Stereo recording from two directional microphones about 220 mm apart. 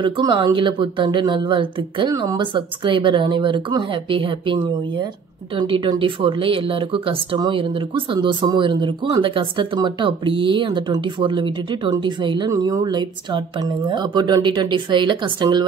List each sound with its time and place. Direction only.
0.0 s speech: 20° right (ahead or behind)